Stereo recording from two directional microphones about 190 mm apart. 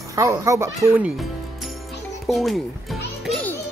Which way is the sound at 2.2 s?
Centre (ahead or behind).